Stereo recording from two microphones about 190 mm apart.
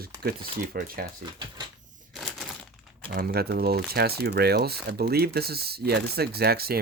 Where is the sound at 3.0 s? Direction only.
55° right (ahead or behind).